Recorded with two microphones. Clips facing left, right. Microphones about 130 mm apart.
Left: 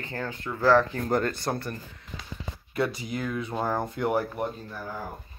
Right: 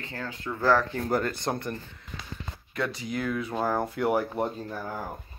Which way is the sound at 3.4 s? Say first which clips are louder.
Even; centre (ahead or behind).